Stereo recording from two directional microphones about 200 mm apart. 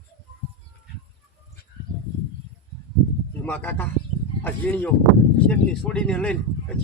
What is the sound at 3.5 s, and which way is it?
Speech, 10° left (ahead or behind).